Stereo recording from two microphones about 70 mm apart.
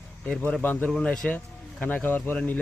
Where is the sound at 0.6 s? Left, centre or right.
Left.